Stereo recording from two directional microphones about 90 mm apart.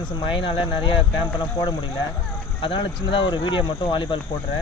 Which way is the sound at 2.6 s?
70° left (ahead or behind).